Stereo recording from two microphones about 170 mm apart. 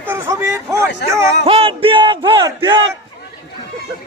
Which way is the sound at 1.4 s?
35° right (ahead or behind).